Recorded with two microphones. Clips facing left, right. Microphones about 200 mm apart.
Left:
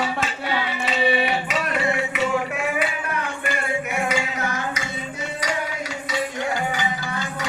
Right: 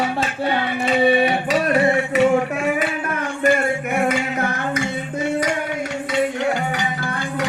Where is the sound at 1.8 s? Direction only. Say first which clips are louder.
Right 7 dB; 55° right (ahead or behind).